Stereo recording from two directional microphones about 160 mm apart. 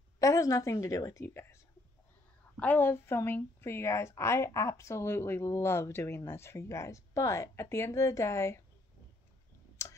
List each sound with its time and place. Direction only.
0.2 s a woman's voice: 20° left (ahead or behind)
9.8 s clicking: 15° left (ahead or behind)